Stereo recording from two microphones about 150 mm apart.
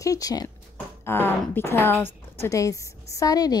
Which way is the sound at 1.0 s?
15° left (ahead or behind).